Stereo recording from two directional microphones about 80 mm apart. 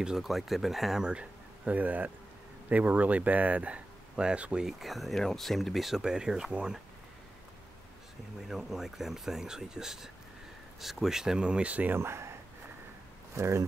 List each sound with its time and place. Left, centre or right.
0.0 s speech: centre
4.6 s speech: centre
8.5 s speech: centre
12.0 s speech: right